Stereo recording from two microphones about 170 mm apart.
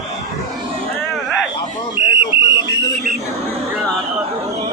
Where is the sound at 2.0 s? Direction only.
30° left (ahead or behind).